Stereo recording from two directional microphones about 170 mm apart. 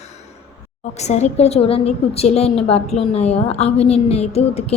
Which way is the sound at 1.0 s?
40° left (ahead or behind).